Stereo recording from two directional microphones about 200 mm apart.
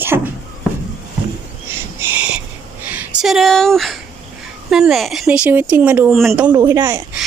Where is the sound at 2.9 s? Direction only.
5° right (ahead or behind).